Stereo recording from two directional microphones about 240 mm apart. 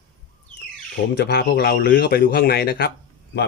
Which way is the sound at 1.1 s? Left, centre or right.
Left.